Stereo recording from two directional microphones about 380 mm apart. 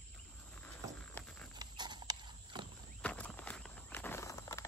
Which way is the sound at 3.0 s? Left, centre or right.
Centre.